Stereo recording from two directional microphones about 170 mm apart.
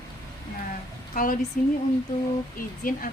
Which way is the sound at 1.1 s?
55° left (ahead or behind).